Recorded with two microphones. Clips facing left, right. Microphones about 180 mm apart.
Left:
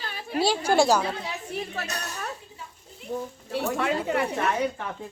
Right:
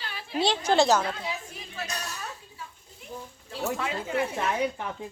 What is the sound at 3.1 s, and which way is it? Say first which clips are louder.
Speech: left 10 dB; 70° left (ahead or behind).